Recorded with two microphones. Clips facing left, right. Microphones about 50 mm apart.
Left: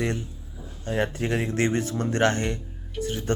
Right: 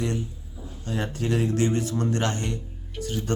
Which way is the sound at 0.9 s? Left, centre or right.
Left.